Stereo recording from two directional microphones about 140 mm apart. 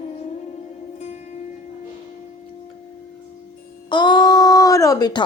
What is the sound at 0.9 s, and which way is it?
Music, 55° left (ahead or behind).